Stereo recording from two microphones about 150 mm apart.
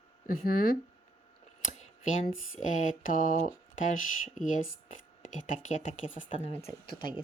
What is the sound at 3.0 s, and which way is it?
A woman's voice, 60° left (ahead or behind).